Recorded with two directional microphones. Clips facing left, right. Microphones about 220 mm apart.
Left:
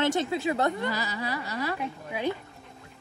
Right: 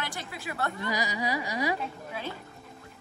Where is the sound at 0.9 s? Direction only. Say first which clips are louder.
Right 2 dB; 15° right (ahead or behind).